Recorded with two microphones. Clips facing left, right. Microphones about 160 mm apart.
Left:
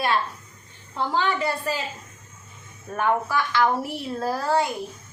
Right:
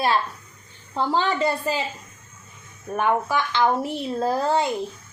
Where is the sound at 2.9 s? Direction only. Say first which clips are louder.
Right 1 dB; 15° right (ahead or behind).